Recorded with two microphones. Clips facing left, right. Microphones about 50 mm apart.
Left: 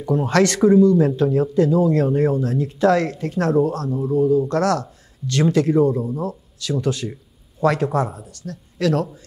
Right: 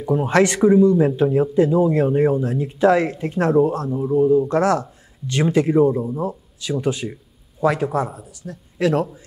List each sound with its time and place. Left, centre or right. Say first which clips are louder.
0.0 s speech: right 1 dB; centre
7.6 s speech: left 1 dB; centre